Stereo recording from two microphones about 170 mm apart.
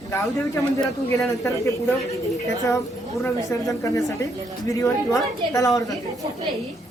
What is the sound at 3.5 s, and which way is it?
Speech, 15° left (ahead or behind).